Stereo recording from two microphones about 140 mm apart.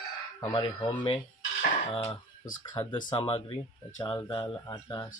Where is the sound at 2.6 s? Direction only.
30° left (ahead or behind).